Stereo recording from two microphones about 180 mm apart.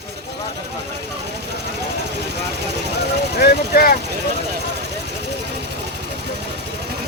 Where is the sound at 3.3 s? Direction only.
65° left (ahead or behind).